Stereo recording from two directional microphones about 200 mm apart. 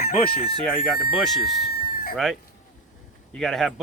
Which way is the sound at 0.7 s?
Centre (ahead or behind).